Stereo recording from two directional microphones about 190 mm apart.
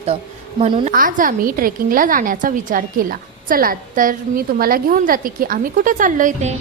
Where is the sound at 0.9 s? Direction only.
45° right (ahead or behind).